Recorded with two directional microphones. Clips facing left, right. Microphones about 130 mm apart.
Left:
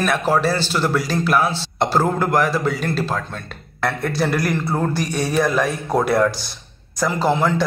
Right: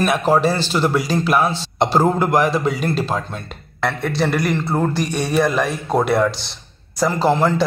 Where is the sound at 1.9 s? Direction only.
15° right (ahead or behind).